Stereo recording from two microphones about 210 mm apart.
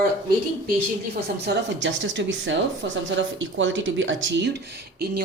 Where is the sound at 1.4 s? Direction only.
60° right (ahead or behind).